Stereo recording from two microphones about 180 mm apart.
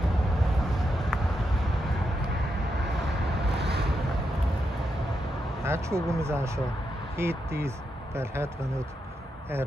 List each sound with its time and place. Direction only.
0.4 s a sound: centre (ahead or behind)
3.4 s vehicle: 65° right (ahead or behind)
5.6 s speech: 15° right (ahead or behind)